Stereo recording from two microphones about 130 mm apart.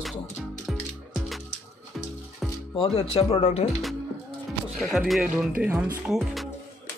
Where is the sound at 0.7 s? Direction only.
Centre (ahead or behind).